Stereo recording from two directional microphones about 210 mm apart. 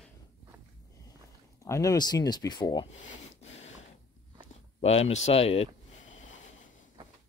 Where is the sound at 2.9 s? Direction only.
30° left (ahead or behind).